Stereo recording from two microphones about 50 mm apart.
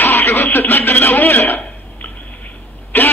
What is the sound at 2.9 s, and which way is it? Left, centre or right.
Throat clearing, left.